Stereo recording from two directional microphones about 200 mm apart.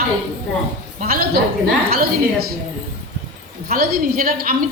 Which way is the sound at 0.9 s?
45° right (ahead or behind).